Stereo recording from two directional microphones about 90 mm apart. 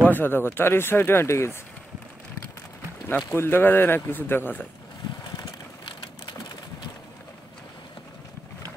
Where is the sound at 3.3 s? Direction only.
25° left (ahead or behind).